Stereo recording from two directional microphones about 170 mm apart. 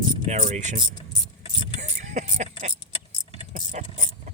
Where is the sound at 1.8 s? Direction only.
45° right (ahead or behind).